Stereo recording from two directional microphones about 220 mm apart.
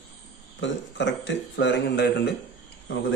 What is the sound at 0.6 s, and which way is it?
Speech, 55° left (ahead or behind).